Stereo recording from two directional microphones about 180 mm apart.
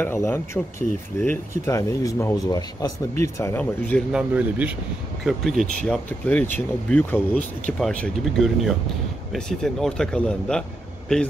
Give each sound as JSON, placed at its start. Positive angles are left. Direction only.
{"t": 0.0, "sound": "speech", "side_deg": 10}
{"t": 4.1, "sound": "speech", "side_deg": -5}